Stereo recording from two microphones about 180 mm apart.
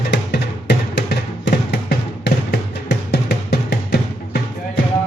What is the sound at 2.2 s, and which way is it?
Music, 65° left (ahead or behind).